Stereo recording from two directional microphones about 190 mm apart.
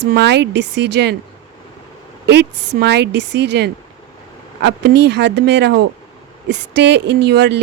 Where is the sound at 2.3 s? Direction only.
65° right (ahead or behind).